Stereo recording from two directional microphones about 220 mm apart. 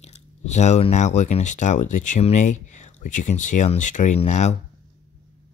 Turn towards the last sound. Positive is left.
turn(degrees=30)  # may be behind; listen again after turning